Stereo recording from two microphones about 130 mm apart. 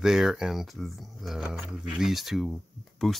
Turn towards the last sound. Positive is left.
turn(degrees=5)  # may be behind; listen again after turning